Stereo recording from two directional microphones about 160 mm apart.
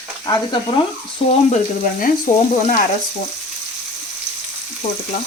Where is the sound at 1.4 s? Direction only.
50° left (ahead or behind).